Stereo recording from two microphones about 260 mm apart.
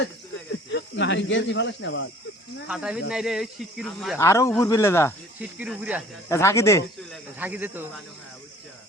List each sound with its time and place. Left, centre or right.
0.5 s speech: left
2.6 s speech: centre
4.2 s speech: centre
5.4 s speech: centre
6.2 s speech: centre
7.1 s speech: centre